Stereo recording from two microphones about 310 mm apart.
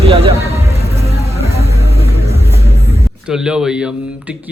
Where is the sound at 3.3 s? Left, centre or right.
Centre.